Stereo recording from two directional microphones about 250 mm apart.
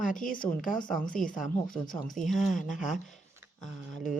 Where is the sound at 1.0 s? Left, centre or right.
Centre.